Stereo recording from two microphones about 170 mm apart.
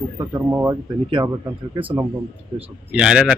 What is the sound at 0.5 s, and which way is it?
Speech, 10° right (ahead or behind).